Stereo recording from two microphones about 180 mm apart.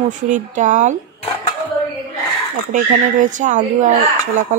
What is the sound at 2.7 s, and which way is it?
Speech, 45° right (ahead or behind).